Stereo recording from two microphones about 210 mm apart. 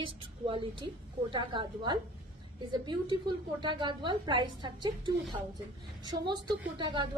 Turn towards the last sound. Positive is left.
turn(degrees=-20)  # may be behind; listen again after turning